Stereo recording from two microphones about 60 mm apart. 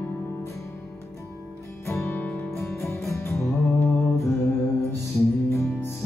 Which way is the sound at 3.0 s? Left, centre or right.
Left.